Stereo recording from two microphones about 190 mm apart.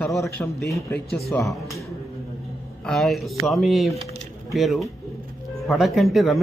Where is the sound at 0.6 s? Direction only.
15° left (ahead or behind).